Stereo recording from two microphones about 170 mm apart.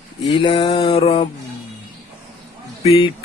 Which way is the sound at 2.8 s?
35° left (ahead or behind).